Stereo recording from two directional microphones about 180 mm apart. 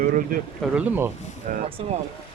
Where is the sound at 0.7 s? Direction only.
10° right (ahead or behind).